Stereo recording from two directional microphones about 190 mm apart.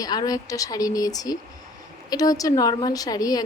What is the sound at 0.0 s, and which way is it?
A woman's voice, 20° left (ahead or behind).